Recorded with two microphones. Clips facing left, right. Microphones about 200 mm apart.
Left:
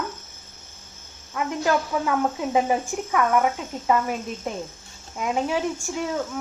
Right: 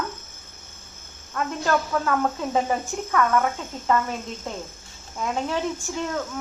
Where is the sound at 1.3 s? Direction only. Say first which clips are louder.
Left 1 dB; 10° left (ahead or behind).